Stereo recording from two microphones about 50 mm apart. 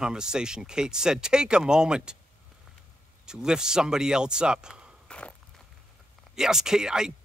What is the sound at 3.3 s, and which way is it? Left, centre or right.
Speech, centre.